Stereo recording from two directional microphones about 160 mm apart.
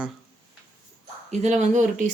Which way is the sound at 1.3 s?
45° right (ahead or behind).